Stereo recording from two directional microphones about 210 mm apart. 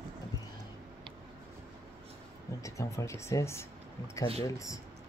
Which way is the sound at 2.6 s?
15° left (ahead or behind).